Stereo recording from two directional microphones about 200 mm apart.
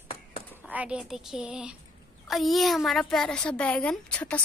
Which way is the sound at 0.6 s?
5° right (ahead or behind).